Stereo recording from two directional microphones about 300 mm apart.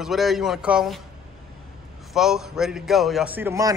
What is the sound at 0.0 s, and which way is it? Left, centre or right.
A man's voice, centre.